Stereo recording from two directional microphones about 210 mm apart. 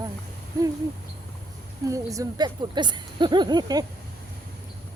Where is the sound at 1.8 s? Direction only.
15° right (ahead or behind).